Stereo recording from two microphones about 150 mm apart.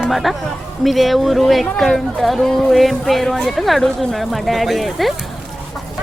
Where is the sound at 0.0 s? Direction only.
Centre (ahead or behind).